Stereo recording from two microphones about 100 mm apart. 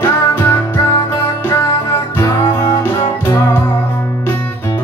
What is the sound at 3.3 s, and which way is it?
Music, 30° left (ahead or behind).